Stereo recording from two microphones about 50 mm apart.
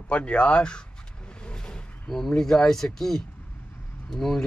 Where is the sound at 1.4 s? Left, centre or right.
Centre.